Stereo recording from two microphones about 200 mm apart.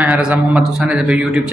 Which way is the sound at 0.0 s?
5° right (ahead or behind).